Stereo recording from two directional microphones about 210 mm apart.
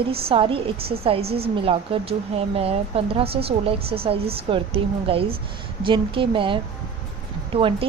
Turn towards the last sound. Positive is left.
turn(degrees=-25)  # may be behind; listen again after turning